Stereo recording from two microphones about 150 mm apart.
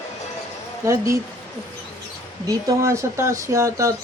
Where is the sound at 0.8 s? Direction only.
20° right (ahead or behind).